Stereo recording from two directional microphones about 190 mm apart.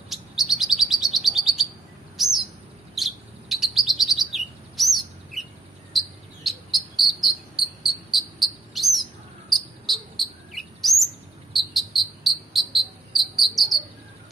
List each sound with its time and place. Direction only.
0.1 s chirp: centre (ahead or behind)
5.9 s cricket: centre (ahead or behind)